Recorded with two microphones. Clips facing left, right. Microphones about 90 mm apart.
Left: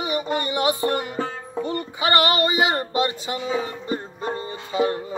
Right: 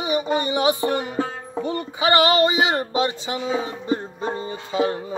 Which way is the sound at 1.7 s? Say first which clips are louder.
Right 2 dB; 20° right (ahead or behind).